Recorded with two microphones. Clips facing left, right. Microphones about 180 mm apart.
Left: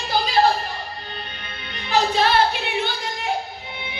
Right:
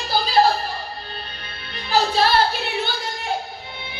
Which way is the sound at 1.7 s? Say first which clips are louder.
Even; 35° right (ahead or behind).